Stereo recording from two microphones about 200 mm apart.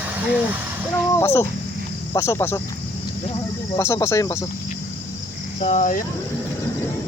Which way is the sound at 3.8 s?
15° left (ahead or behind).